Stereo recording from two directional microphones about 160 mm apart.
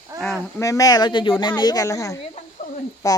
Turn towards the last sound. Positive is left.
turn(degrees=20)  # may be behind; listen again after turning